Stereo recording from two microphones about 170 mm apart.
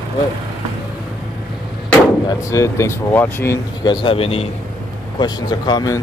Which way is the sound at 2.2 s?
20° left (ahead or behind).